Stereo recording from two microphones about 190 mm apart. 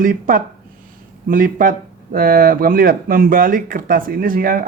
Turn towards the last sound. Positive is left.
turn(degrees=-50)  # may be behind; listen again after turning